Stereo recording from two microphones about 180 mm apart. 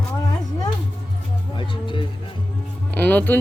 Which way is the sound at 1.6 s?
25° left (ahead or behind).